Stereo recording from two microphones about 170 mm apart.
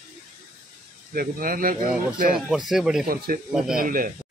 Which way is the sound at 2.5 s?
Centre (ahead or behind).